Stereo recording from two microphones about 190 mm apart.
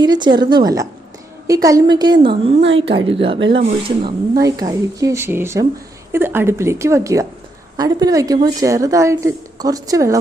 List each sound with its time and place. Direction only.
0.0 s a woman's voice: 25° right (ahead or behind)